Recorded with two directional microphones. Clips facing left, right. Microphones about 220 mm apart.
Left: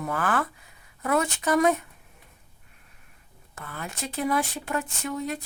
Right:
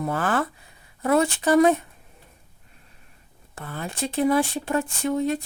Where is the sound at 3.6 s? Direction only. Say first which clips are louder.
Right 6 dB; 30° right (ahead or behind).